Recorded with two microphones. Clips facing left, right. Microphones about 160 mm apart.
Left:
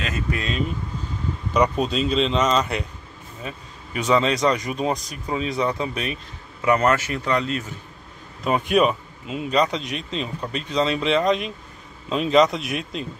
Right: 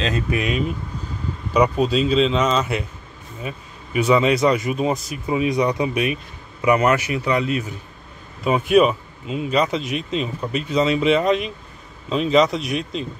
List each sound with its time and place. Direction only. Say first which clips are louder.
0.0 s speech: right 5 dB; 15° right (ahead or behind); by 13.0 s centre (ahead or behind)